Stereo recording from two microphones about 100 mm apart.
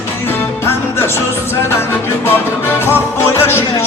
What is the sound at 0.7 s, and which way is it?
Music, 25° left (ahead or behind).